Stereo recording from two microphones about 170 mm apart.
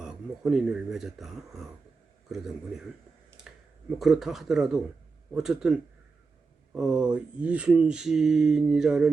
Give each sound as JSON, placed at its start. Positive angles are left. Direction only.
{"t": 0.0, "sound": "speech", "side_deg": -5}
{"t": 3.5, "sound": "a sound", "side_deg": -5}
{"t": 3.9, "sound": "speech", "side_deg": 0}